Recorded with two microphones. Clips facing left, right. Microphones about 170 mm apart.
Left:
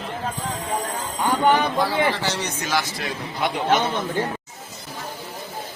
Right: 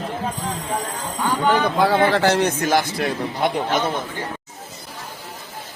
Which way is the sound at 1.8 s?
60° right (ahead or behind).